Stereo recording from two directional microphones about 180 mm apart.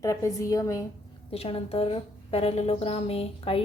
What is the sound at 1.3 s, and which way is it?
A woman's voice, 35° left (ahead or behind).